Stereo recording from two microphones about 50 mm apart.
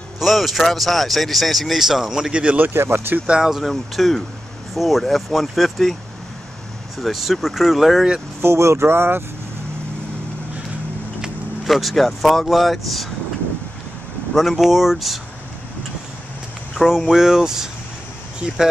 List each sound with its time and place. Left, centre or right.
0.2 s speech: centre
2.3 s speech: right
2.6 s speech: right
3.3 s speech: centre
3.6 s speech: centre
7.0 s speech: centre
8.4 s speech: right
11.6 s speech: centre
14.3 s speech: centre
16.8 s speech: centre